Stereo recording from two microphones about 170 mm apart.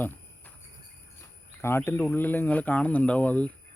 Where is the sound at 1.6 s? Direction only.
15° left (ahead or behind).